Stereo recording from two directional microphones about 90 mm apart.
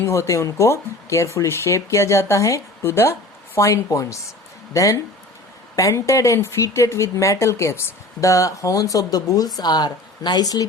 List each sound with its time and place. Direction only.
0.0 s speech: 30° left (ahead or behind)